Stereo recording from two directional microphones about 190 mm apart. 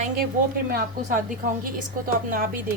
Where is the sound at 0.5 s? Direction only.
50° right (ahead or behind).